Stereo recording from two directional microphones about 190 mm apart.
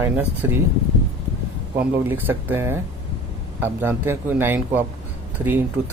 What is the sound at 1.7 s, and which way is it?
Speech, 10° right (ahead or behind).